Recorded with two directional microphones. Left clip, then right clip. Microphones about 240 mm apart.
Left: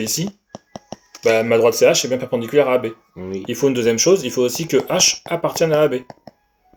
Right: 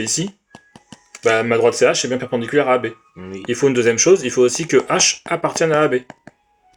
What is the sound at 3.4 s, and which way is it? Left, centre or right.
Speech, right.